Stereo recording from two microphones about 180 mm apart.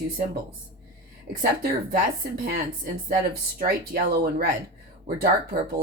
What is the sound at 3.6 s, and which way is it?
Speech, 55° right (ahead or behind).